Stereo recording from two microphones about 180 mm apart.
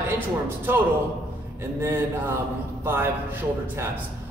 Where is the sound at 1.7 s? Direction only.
15° right (ahead or behind).